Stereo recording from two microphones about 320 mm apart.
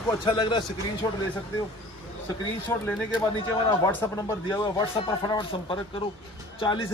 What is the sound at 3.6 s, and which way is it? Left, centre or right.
Speech, centre.